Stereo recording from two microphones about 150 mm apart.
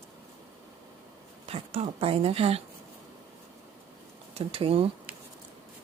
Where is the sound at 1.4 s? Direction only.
40° right (ahead or behind).